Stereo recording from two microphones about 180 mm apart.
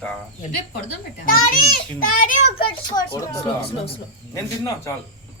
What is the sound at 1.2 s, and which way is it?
A child's voice, 50° left (ahead or behind).